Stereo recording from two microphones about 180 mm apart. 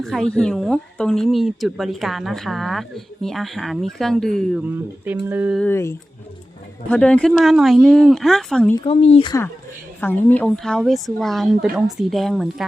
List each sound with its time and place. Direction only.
0.0 s a woman's voice: centre (ahead or behind)
4.6 s speech: 10° right (ahead or behind)
5.5 s a woman's voice: 10° left (ahead or behind)
8.7 s speech: 30° left (ahead or behind)
10.0 s a woman's voice: 10° left (ahead or behind)